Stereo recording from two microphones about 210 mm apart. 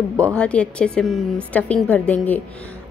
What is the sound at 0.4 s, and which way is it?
A woman's voice, 5° left (ahead or behind).